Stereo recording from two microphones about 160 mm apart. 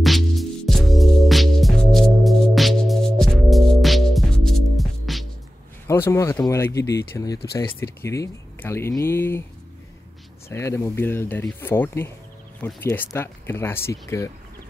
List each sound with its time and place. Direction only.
0.0 s music: centre (ahead or behind)
5.9 s speech: 15° left (ahead or behind)
10.5 s speech: 15° left (ahead or behind)